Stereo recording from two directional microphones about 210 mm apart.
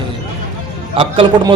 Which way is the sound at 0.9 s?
25° right (ahead or behind).